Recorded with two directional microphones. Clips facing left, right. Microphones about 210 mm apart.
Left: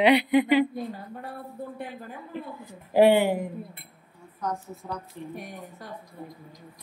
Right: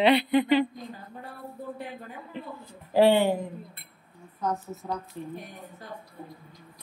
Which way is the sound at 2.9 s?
15° left (ahead or behind).